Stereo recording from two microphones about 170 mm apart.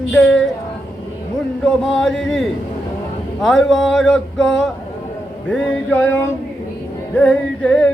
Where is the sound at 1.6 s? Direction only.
Centre (ahead or behind).